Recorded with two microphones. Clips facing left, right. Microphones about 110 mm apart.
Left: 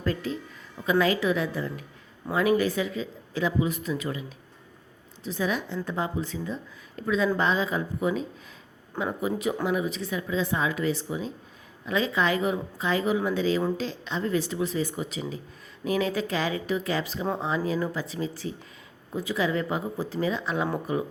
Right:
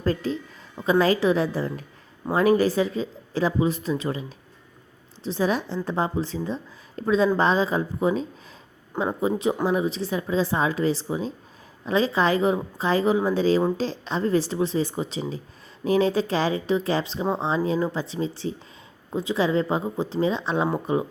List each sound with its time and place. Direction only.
0.0 s a woman's voice: 35° right (ahead or behind)